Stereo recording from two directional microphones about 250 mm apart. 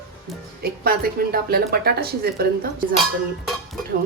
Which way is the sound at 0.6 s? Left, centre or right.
Right.